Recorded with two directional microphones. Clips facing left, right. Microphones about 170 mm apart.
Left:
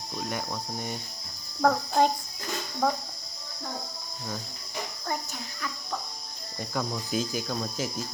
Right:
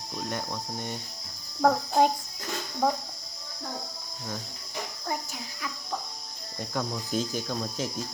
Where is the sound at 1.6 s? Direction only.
15° right (ahead or behind).